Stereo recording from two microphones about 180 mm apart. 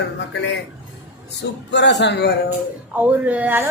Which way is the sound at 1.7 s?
75° left (ahead or behind).